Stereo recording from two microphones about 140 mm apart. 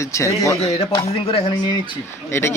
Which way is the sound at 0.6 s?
45° left (ahead or behind).